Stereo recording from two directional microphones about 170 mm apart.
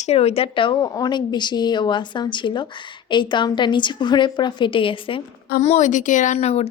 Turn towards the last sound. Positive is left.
turn(degrees=35)  # may be behind; listen again after turning